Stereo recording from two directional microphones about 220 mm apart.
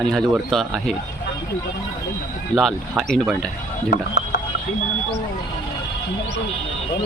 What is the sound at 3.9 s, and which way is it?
Speech, 45° left (ahead or behind).